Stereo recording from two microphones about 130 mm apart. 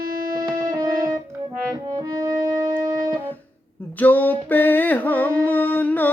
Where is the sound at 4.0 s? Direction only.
15° left (ahead or behind).